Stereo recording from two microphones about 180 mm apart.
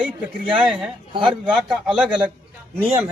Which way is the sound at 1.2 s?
5° right (ahead or behind).